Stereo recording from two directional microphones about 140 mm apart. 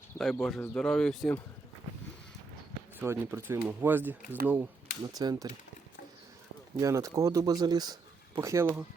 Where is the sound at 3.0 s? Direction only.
15° right (ahead or behind).